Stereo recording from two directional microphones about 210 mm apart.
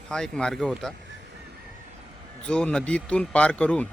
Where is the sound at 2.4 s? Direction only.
5° left (ahead or behind).